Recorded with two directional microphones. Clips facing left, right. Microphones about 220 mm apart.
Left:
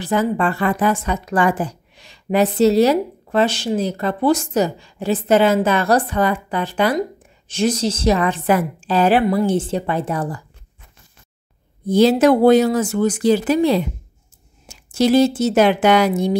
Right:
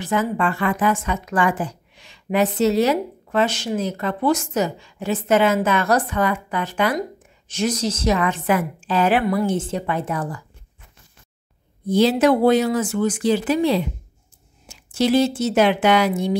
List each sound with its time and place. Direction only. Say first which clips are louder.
0.0 s a woman's voice: left 3 dB; 35° left (ahead or behind)
11.9 s a woman's voice: left 3 dB; 40° left (ahead or behind)